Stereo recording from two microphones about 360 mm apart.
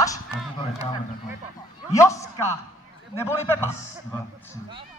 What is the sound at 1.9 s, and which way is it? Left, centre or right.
Speech, centre.